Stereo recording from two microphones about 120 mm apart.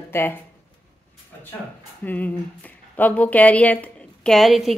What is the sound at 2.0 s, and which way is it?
Speech, 15° left (ahead or behind).